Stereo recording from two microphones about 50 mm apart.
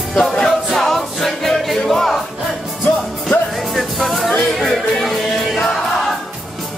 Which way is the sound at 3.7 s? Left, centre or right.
Centre.